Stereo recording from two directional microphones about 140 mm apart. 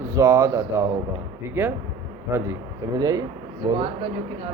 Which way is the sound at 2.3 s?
15° right (ahead or behind).